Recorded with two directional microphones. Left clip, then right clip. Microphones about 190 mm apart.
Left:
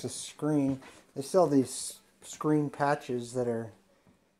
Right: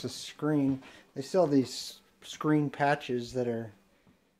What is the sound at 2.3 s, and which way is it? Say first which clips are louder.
Speech: even; 15° right (ahead or behind).